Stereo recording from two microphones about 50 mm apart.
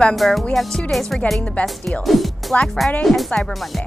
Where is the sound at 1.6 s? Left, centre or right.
Left.